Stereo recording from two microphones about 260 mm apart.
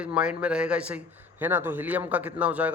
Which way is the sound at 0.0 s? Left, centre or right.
Centre.